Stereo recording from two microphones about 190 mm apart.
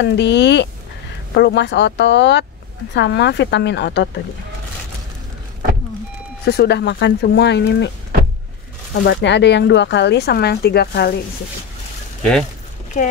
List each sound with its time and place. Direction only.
0.0 s speech: 65° left (ahead or behind)
6.5 s speech: 60° left (ahead or behind)
9.0 s speech: 65° left (ahead or behind)
12.2 s speech: 5° left (ahead or behind)